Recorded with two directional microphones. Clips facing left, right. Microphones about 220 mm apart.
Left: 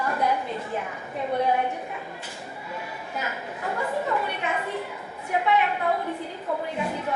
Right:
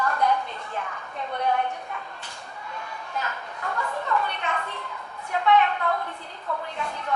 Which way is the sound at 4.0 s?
10° left (ahead or behind).